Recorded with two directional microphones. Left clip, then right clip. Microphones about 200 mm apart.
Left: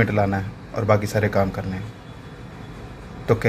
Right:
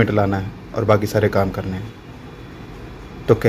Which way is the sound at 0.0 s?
15° right (ahead or behind).